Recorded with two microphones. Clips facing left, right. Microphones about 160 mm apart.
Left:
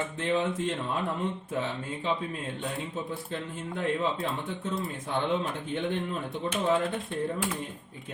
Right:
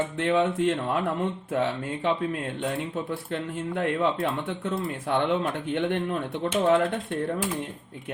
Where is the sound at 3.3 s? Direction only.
65° right (ahead or behind).